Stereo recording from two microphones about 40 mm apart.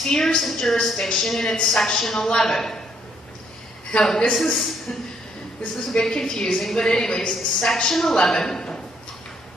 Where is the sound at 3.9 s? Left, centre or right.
Left.